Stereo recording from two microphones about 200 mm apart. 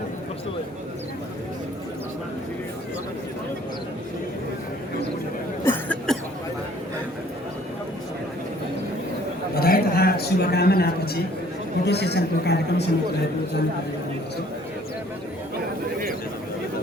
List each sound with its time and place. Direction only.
5.6 s cough: 10° left (ahead or behind)
9.6 s a sound: 50° left (ahead or behind)
11.9 s a man's voice: 55° left (ahead or behind)